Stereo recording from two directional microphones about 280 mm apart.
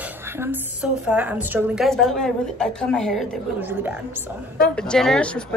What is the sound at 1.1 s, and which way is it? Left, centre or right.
A woman's voice, centre.